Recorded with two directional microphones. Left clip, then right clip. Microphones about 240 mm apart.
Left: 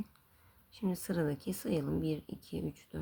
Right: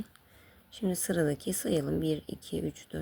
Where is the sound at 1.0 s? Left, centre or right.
Centre.